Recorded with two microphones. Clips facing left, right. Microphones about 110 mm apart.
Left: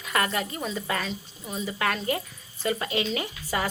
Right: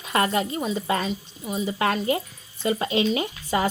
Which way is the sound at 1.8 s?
25° right (ahead or behind).